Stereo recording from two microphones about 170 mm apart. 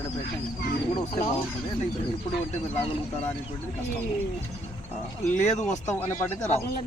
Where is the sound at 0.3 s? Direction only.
90° left.